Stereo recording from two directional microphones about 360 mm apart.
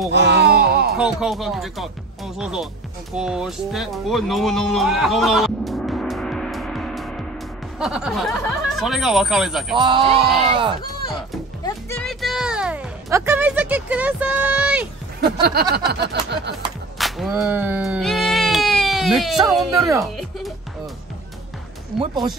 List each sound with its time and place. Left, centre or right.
0.1 s a sound: right
0.9 s speech: centre
3.2 s music: centre
7.8 s speech: centre
9.8 s speech: centre
11.6 s music: centre
15.7 s a sound: right
17.0 s a sound: centre
22.0 s speech: centre